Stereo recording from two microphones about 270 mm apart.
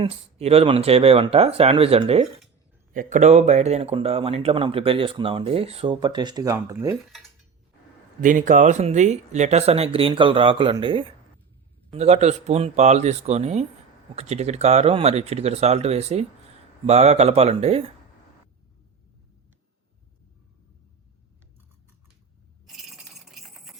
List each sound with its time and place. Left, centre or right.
0.0 s speech: right
8.2 s speech: right
22.6 s coin: centre